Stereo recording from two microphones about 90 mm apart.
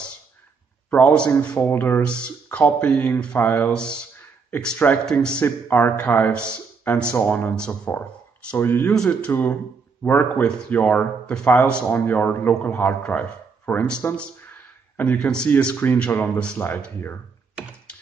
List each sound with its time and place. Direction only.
0.8 s speech: 15° left (ahead or behind)
1.6 s speech: 25° left (ahead or behind)
3.7 s speech: 10° left (ahead or behind)
5.4 s speech: 25° left (ahead or behind)
7.5 s speech: 10° left (ahead or behind)
7.9 s a sound: 15° left (ahead or behind)
8.5 s speech: 25° left (ahead or behind)
8.9 s speech: 5° left (ahead or behind)
9.3 s speech: 25° left (ahead or behind)
14.1 s a sound: 15° left (ahead or behind)
15.1 s speech: 10° left (ahead or behind)
15.5 s speech: 20° left (ahead or behind)
16.5 s speech: 25° left (ahead or behind)